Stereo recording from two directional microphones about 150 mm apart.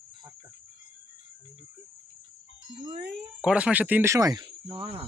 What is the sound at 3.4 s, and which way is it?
Speech, 5° right (ahead or behind).